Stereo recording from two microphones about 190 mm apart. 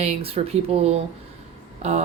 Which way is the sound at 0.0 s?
30° right (ahead or behind).